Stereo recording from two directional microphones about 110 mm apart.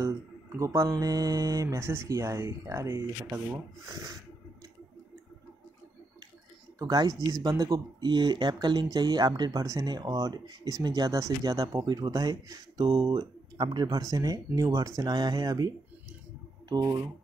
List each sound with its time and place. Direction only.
0.0 s speech: 30° right (ahead or behind)
3.9 s speech: 35° right (ahead or behind)
6.8 s speech: 35° right (ahead or behind)